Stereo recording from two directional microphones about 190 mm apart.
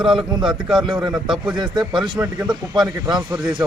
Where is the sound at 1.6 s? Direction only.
20° right (ahead or behind).